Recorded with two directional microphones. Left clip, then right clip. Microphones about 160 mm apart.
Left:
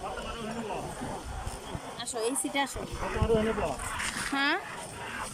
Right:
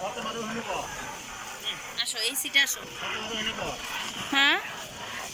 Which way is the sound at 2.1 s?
50° left (ahead or behind).